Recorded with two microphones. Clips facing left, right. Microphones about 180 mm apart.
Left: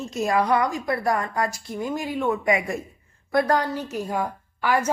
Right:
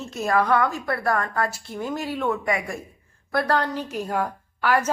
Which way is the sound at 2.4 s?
20° left (ahead or behind).